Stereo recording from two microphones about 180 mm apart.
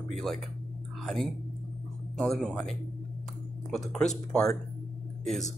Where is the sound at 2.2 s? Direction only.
5° left (ahead or behind).